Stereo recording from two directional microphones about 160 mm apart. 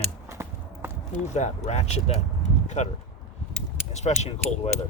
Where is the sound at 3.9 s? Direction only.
45° left (ahead or behind).